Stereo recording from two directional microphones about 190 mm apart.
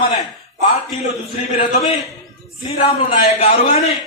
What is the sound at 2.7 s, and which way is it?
Speech, 35° left (ahead or behind).